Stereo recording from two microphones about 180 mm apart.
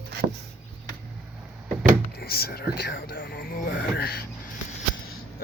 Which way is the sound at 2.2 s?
55° left (ahead or behind).